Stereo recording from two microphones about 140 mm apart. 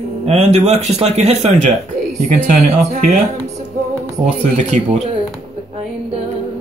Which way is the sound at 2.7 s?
55° right (ahead or behind).